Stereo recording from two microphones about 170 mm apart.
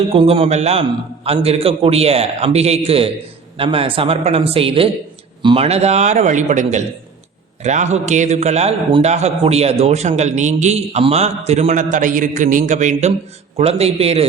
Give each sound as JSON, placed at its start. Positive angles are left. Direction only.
{"t": 0.1, "sound": "a man's voice", "side_deg": -35}